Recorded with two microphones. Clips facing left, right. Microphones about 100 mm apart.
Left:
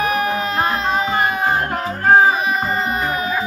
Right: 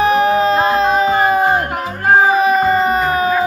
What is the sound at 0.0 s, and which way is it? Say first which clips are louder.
Music: right 7 dB; 30° right (ahead or behind).